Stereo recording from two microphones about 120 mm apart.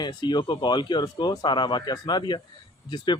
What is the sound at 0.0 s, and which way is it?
Speech, 35° left (ahead or behind).